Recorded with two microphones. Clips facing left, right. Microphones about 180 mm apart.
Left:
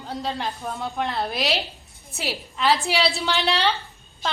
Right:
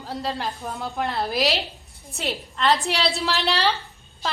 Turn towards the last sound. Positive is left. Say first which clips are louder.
# even
turn(degrees=0)  # may be behind; listen again after turning